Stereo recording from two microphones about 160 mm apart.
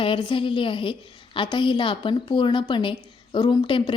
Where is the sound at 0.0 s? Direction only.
30° left (ahead or behind).